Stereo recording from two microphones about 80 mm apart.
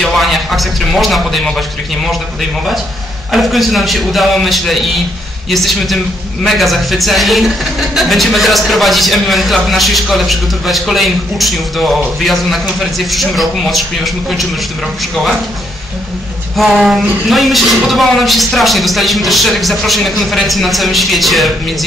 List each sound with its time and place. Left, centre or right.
0.0 s a sound: centre
3.3 s a man's voice: centre
13.1 s a man's voice: centre
16.5 s a man's voice: centre